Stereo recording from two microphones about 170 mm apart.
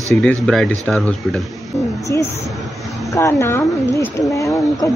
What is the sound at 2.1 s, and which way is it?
A woman's voice, 15° left (ahead or behind).